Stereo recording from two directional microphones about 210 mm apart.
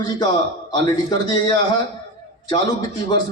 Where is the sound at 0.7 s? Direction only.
20° left (ahead or behind).